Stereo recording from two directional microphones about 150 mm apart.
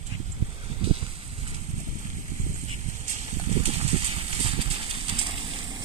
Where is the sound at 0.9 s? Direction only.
45° right (ahead or behind).